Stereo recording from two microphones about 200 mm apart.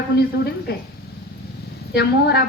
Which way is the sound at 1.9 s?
55° left (ahead or behind).